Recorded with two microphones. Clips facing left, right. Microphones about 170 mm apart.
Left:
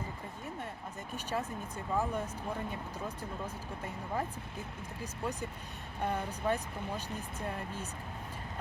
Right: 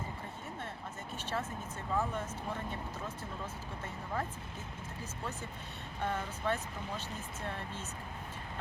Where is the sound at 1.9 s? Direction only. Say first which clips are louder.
Left 2 dB; 15° left (ahead or behind).